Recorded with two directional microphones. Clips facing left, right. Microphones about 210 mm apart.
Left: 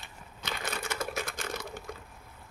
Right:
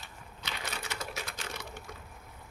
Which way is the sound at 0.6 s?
50° left (ahead or behind).